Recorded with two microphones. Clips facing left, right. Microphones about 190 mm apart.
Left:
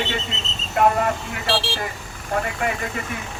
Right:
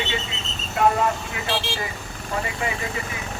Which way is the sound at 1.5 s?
30° left (ahead or behind).